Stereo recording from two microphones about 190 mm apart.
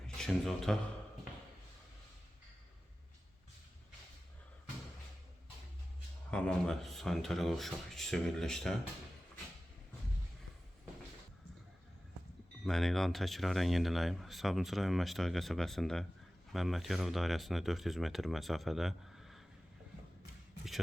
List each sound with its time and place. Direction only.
0.2 s speech: centre (ahead or behind)
6.3 s speech: 5° left (ahead or behind)
12.6 s speech: centre (ahead or behind)